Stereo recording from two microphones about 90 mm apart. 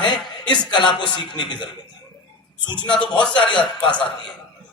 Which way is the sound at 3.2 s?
60° left (ahead or behind).